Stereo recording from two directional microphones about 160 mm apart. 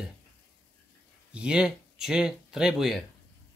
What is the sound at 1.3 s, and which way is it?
Speech, 5° right (ahead or behind).